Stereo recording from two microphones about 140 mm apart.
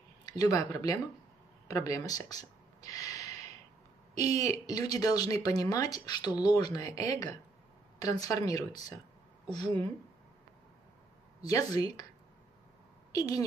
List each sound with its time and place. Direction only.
0.2 s speech: 25° left (ahead or behind)
4.1 s speech: 55° right (ahead or behind)
4.4 s speech: 25° left (ahead or behind)
11.4 s speech: 25° left (ahead or behind)
13.1 s a woman's voice: 25° left (ahead or behind)